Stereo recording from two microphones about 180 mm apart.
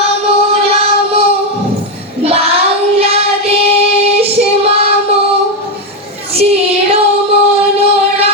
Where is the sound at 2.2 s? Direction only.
35° right (ahead or behind).